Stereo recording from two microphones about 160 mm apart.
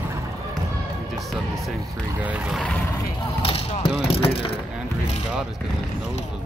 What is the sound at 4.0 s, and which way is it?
Speech, 35° left (ahead or behind).